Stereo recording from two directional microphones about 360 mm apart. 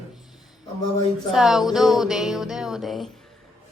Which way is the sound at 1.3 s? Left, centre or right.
Centre.